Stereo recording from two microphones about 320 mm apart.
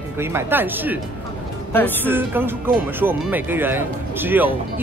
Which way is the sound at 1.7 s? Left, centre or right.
Centre.